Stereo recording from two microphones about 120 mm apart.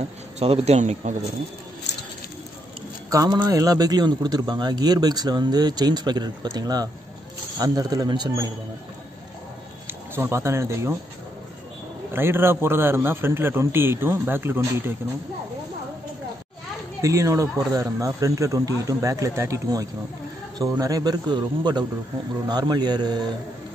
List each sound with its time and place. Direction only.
0.4 s speech: 65° right (ahead or behind)
3.1 s a man's voice: 30° right (ahead or behind)
10.1 s a man's voice: 20° right (ahead or behind)
12.1 s a man's voice: 20° right (ahead or behind)
17.0 s a man's voice: 25° right (ahead or behind)